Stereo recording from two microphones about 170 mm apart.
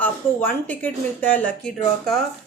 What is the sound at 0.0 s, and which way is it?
Speech, 10° left (ahead or behind).